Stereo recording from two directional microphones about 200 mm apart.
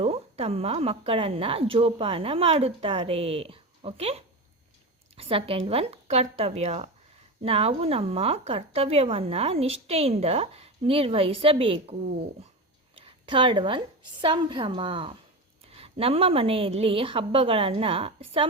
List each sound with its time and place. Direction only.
0.0 s a woman's voice: 30° right (ahead or behind)
13.0 s a woman's voice: 25° right (ahead or behind)